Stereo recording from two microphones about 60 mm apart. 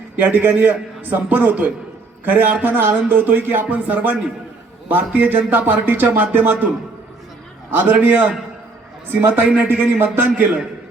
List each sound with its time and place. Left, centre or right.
0.2 s a man's voice: right
7.7 s speech: right
9.0 s speech: right
10.2 s a man's voice: right